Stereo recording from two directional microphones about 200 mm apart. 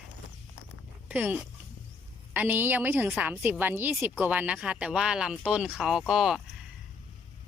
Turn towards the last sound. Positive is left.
turn(degrees=0)  # may be behind; listen again after turning